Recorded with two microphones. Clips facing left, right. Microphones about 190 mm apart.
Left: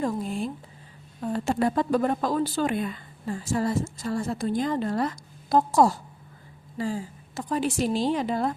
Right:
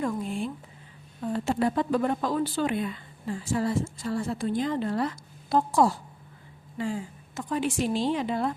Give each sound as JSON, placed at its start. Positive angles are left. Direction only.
{"t": 0.0, "sound": "a woman's voice", "side_deg": 40}